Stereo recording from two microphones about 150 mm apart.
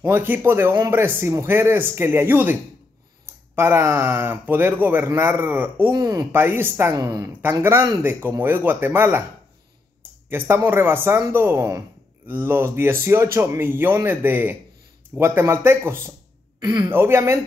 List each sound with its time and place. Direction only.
0.0 s speech: 15° right (ahead or behind)
5.9 s a woman's voice: 25° right (ahead or behind)
10.3 s speech: 15° right (ahead or behind)
16.5 s speech: 25° right (ahead or behind)
16.9 s speech: 15° right (ahead or behind)